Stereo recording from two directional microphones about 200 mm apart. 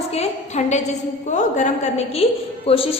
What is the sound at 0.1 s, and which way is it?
A woman's voice, 35° left (ahead or behind).